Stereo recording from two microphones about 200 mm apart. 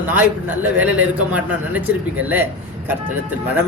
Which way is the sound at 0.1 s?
10° right (ahead or behind).